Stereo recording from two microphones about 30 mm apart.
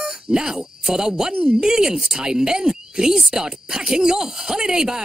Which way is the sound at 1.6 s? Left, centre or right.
Right.